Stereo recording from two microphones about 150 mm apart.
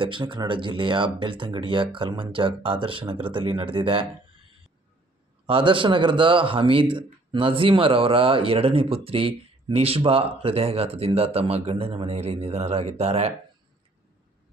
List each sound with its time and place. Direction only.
0.0 s speech: 30° right (ahead or behind)
5.5 s speech: 35° right (ahead or behind)